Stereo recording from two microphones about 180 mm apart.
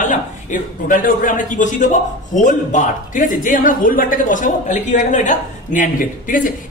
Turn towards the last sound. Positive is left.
turn(degrees=50)  # may be behind; listen again after turning